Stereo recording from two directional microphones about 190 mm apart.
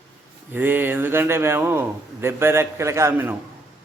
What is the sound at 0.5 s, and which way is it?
A man's voice, 10° right (ahead or behind).